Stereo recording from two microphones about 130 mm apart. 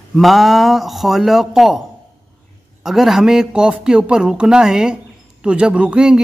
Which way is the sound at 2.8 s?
5° right (ahead or behind).